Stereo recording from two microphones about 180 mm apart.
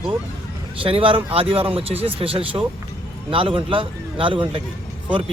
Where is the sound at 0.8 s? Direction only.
30° right (ahead or behind).